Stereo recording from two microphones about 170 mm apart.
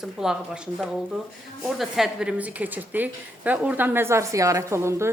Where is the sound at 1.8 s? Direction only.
Centre (ahead or behind).